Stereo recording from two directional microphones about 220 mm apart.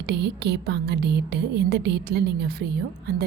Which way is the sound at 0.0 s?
50° right (ahead or behind).